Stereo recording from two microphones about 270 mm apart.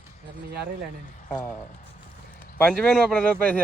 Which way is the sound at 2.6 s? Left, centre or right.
Centre.